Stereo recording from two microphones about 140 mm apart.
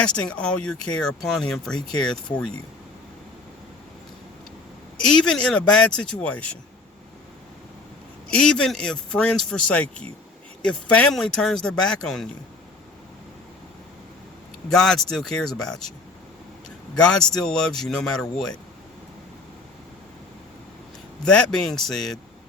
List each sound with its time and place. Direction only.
0.0 s a man's voice: 5° left (ahead or behind)
4.9 s speech: 5° left (ahead or behind)
8.3 s a man's voice: 5° left (ahead or behind)
14.7 s a man's voice: 5° left (ahead or behind)
21.2 s a man's voice: 5° left (ahead or behind)